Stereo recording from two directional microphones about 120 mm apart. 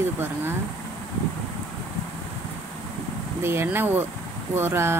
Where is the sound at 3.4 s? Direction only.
20° right (ahead or behind).